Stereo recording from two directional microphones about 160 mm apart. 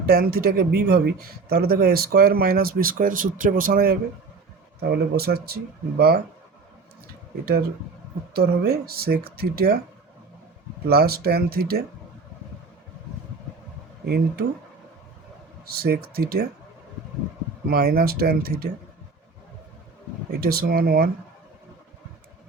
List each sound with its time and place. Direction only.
0.0 s speech: 70° right (ahead or behind)
4.8 s speech: 80° right
8.3 s speech: 80° right
10.8 s speech: 75° right (ahead or behind)
14.0 s speech: 80° right
15.7 s speech: 75° right (ahead or behind)
17.7 s speech: 70° right (ahead or behind)
20.3 s speech: 70° right (ahead or behind)